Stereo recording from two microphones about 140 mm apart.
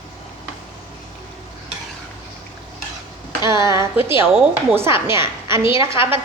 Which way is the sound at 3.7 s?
20° right (ahead or behind).